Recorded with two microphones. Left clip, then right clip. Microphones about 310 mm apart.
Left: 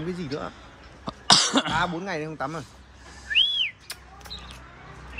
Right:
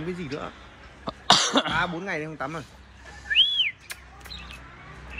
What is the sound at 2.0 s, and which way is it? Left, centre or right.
Speech, left.